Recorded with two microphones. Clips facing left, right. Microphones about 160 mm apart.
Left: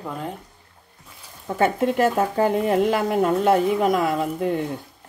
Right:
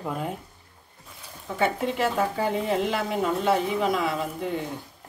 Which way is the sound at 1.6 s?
50° left (ahead or behind).